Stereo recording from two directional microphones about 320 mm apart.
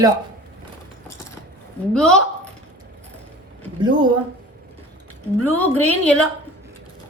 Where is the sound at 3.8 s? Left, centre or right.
Centre.